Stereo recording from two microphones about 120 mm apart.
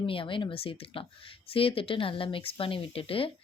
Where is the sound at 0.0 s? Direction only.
50° left (ahead or behind).